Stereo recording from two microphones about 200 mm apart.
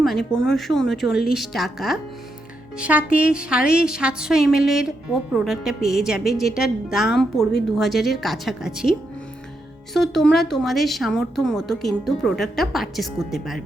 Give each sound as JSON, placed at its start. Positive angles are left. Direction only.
{"t": 0.0, "sound": "a woman's voice", "side_deg": 0}